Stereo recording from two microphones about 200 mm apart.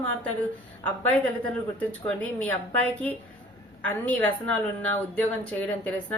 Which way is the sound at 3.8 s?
10° left (ahead or behind).